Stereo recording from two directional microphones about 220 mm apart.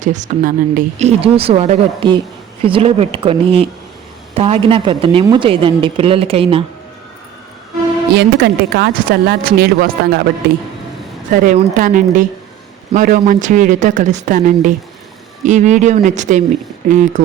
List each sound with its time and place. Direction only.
0.0 s a woman's voice: 35° right (ahead or behind)
8.1 s speech: 45° right (ahead or behind)
11.3 s a woman's voice: 35° right (ahead or behind)